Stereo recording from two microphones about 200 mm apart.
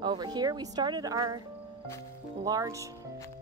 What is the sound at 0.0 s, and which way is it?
Speech, 20° right (ahead or behind).